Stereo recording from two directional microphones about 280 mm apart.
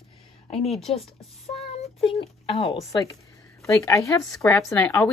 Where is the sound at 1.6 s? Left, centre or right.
Left.